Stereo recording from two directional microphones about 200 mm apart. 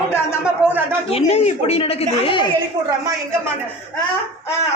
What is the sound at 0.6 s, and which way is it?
Speech, 10° right (ahead or behind).